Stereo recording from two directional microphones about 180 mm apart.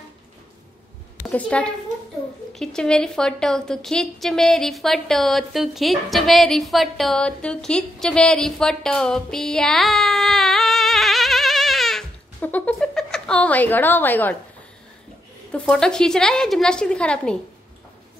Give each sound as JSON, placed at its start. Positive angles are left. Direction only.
{"t": 1.2, "sound": "a woman's voice", "side_deg": 5}
{"t": 15.5, "sound": "a woman's voice", "side_deg": 5}